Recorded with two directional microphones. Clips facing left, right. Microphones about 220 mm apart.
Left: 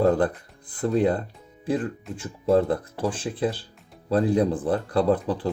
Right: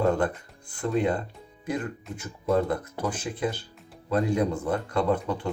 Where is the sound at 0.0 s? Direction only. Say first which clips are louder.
Left 3 dB; 35° left (ahead or behind).